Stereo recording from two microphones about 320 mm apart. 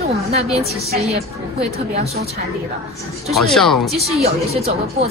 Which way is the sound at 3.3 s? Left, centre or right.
Centre.